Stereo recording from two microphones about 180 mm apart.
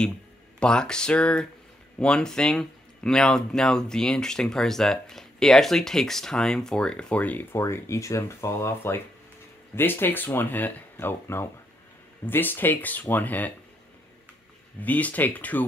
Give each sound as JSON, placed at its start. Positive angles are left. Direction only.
{"t": 0.6, "sound": "speech", "side_deg": 5}
{"t": 14.8, "sound": "speech", "side_deg": 10}